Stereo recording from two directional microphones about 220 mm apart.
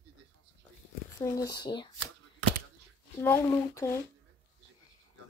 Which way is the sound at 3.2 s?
10° left (ahead or behind).